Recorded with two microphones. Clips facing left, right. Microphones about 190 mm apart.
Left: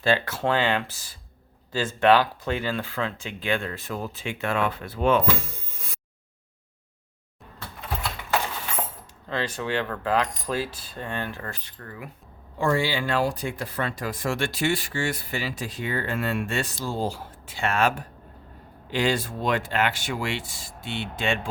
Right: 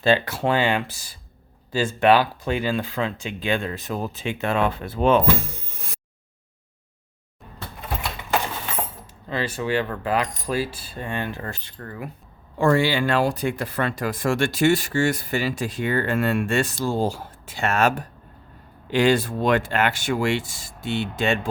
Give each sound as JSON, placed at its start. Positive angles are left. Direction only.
{"t": 0.0, "sound": "speech", "side_deg": -15}
{"t": 9.3, "sound": "speech", "side_deg": -5}
{"t": 12.5, "sound": "speech", "side_deg": -60}
{"t": 18.9, "sound": "speech", "side_deg": -55}